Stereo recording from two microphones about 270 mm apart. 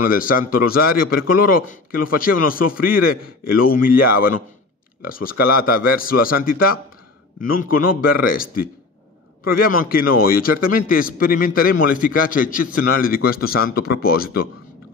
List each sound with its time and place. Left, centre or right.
0.0 s a man's voice: left
7.9 s a man's voice: left
9.7 s a man's voice: left